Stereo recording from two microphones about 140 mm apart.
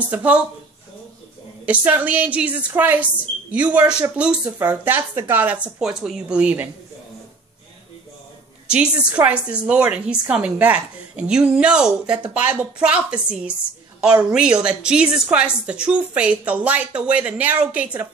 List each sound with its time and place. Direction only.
0.1 s a woman's voice: 10° right (ahead or behind)
1.7 s a woman's voice: 10° right (ahead or behind)
8.6 s a woman's voice: 10° right (ahead or behind)